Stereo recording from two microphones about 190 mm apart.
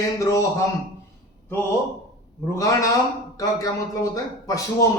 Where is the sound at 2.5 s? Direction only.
20° left (ahead or behind).